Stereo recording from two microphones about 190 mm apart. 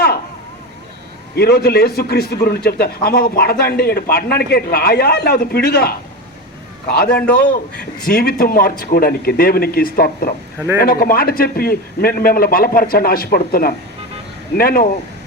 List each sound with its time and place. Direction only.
1.4 s a man's voice: 55° left (ahead or behind)
7.1 s a man's voice: 5° left (ahead or behind)
7.8 s a man's voice: 50° left (ahead or behind)